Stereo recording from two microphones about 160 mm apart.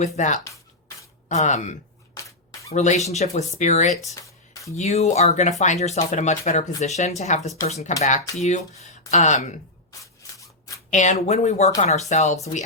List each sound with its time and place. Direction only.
0.2 s speech: 50° left (ahead or behind)
2.1 s a sound: 20° left (ahead or behind)
2.7 s speech: 45° left (ahead or behind)
4.1 s music: 20° left (ahead or behind)
4.8 s speech: 45° left (ahead or behind)
10.9 s speech: 50° left (ahead or behind)